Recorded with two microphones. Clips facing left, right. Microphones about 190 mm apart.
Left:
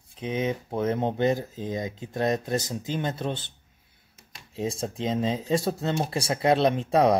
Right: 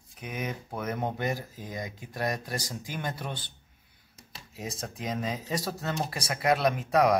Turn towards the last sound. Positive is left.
turn(degrees=25)  # may be behind; listen again after turning